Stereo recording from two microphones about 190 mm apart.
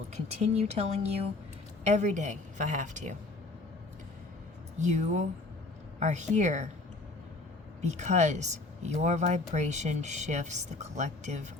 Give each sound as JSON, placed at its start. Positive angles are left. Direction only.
{"t": 0.1, "sound": "speech", "side_deg": -35}
{"t": 4.8, "sound": "speech", "side_deg": -40}
{"t": 7.8, "sound": "speech", "side_deg": -35}